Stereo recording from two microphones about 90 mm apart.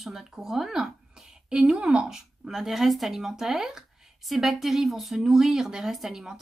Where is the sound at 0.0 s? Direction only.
5° right (ahead or behind).